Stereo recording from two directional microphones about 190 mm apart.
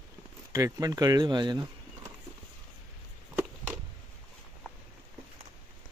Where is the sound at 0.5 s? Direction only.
20° right (ahead or behind).